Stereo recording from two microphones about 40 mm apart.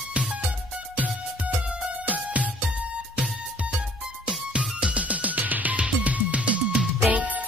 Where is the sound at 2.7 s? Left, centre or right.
Right.